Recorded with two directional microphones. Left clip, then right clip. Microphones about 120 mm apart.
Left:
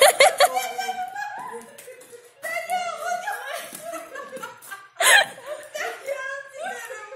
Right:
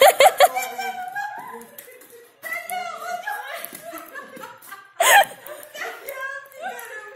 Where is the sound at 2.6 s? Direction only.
40° left (ahead or behind).